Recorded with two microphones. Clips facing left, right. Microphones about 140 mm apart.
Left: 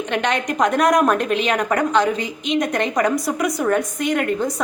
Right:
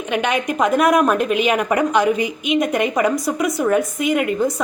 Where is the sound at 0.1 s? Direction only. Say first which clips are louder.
Right 3 dB; 5° right (ahead or behind).